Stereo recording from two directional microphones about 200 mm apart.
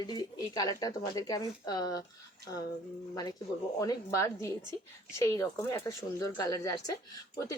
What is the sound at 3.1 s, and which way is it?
Speech, 20° left (ahead or behind).